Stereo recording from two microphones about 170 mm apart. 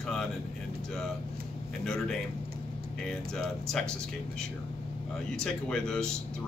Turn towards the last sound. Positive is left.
turn(degrees=5)  # may be behind; listen again after turning